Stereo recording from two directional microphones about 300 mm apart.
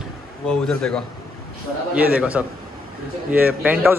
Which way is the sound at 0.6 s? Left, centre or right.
Centre.